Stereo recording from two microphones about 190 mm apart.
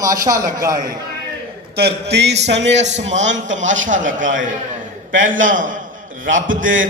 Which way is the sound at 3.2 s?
75° right (ahead or behind).